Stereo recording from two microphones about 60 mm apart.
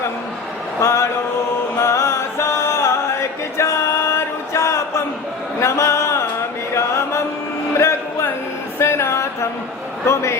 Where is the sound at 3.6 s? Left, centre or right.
Left.